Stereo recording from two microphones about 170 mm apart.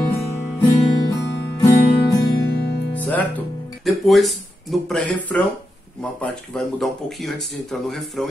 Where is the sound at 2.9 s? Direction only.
10° left (ahead or behind).